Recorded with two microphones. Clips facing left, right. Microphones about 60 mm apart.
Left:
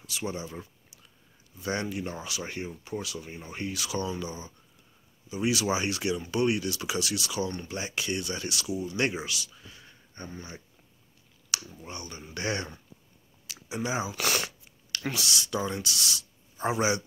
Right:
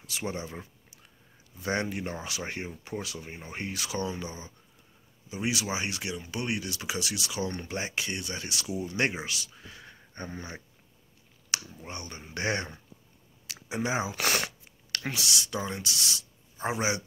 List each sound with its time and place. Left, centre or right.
0.1 s speech: right
5.5 s speech: centre
7.5 s speech: right
7.8 s speech: right
9.7 s a sound: right
10.2 s speech: right
11.8 s speech: right
13.7 s speech: right
15.0 s speech: centre